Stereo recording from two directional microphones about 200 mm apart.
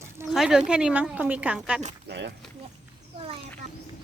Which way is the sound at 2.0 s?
60° right (ahead or behind).